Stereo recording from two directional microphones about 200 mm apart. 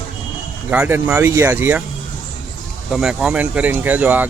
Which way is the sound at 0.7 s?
10° right (ahead or behind).